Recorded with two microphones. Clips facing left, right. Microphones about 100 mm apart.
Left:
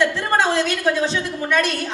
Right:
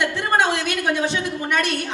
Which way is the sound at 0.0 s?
15° right (ahead or behind).